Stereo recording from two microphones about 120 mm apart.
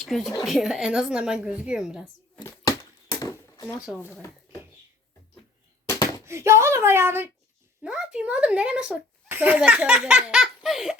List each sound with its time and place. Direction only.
0.0 s a woman's voice: centre (ahead or behind)
3.2 s a sound: 25° left (ahead or behind)
6.2 s speech: 25° right (ahead or behind)
7.8 s a woman's voice: 5° right (ahead or behind)